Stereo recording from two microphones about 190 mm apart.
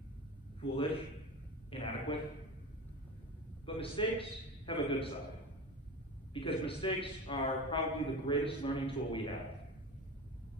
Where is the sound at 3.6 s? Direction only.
25° left (ahead or behind).